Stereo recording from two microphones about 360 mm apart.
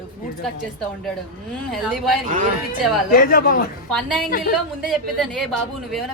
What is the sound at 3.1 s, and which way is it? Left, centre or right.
Speech, left.